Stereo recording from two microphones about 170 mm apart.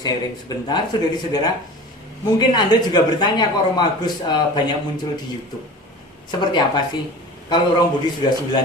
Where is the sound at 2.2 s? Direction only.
25° left (ahead or behind).